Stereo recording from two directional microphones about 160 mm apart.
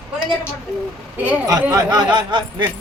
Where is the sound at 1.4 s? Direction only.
20° right (ahead or behind).